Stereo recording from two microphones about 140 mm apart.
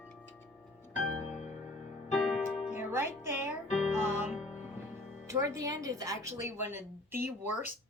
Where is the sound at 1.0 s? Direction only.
60° left (ahead or behind).